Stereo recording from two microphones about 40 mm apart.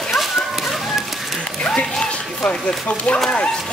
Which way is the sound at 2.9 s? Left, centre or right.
Left.